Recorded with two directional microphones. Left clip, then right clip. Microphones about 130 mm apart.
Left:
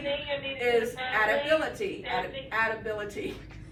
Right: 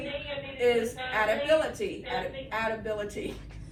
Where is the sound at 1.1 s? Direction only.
Centre (ahead or behind).